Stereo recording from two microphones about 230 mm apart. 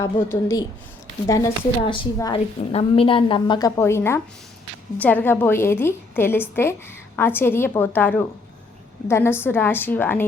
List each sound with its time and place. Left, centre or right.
0.0 s a woman's voice: centre